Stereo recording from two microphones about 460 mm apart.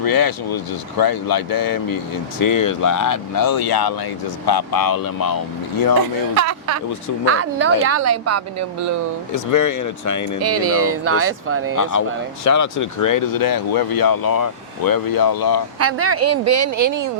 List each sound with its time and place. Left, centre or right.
0.0 s speech: left
6.3 s speech: right
9.3 s speech: left
10.4 s speech: right
11.8 s speech: left
15.8 s speech: right